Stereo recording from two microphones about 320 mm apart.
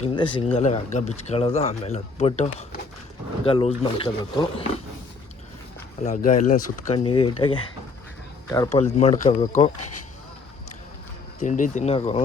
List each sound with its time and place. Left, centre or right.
0.0 s speech: centre
6.0 s speech: left
8.8 s speech: left
11.3 s speech: left